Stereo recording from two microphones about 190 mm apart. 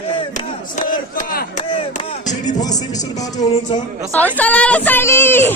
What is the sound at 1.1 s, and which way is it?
Speech, 50° left (ahead or behind).